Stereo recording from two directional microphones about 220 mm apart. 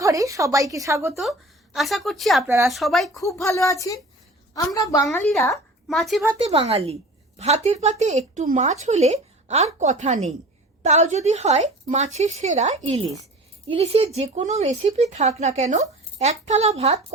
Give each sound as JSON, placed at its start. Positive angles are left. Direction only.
{"t": 0.0, "sound": "a woman's voice", "side_deg": -15}
{"t": 1.1, "sound": "speech", "side_deg": 0}
{"t": 3.2, "sound": "speech", "side_deg": 15}
{"t": 5.1, "sound": "speech", "side_deg": 5}
{"t": 6.4, "sound": "speech", "side_deg": -25}